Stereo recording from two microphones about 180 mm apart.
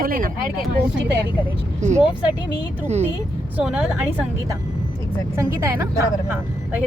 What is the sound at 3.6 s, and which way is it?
Speech, 5° right (ahead or behind).